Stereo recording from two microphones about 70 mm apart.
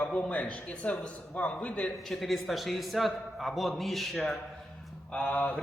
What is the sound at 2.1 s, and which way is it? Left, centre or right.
A man's voice, centre.